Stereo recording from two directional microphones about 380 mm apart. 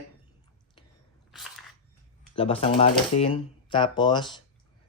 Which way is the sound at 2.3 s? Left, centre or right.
Centre.